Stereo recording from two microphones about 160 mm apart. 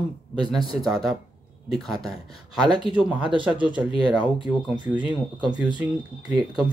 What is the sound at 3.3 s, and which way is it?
Speech, 30° right (ahead or behind).